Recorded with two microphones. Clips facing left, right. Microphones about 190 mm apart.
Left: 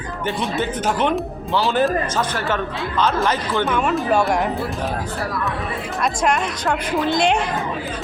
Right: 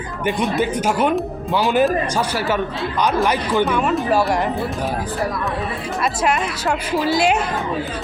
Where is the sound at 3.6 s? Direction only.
Centre (ahead or behind).